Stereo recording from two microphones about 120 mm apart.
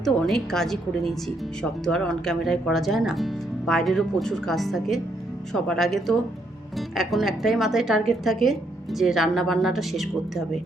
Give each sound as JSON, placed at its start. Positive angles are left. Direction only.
{"t": 0.0, "sound": "speech", "side_deg": 5}